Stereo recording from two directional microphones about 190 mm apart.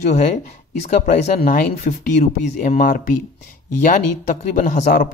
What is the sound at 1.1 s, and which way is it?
Speech, 45° left (ahead or behind).